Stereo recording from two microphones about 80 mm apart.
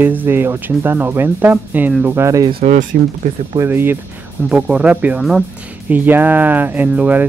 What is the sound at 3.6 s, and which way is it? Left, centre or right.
Speech, right.